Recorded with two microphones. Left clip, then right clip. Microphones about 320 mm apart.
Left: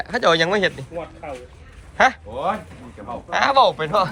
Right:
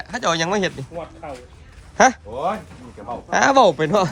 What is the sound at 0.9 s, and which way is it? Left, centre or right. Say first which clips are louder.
Speech: left 1 dB; right.